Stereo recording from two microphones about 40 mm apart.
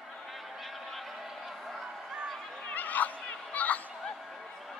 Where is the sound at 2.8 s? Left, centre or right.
Left.